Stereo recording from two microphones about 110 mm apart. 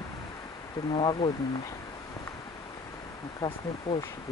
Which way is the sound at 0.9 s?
50° left (ahead or behind).